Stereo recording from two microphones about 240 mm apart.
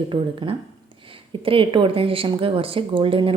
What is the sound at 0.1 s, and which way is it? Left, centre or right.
A woman's voice, right.